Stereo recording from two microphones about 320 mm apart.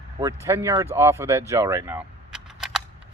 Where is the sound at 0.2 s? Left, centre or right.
Centre.